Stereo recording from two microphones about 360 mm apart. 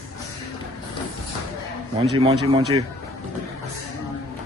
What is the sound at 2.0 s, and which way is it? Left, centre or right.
Speech, centre.